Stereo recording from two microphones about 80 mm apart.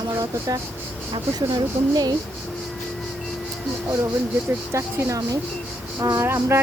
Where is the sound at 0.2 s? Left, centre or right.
Right.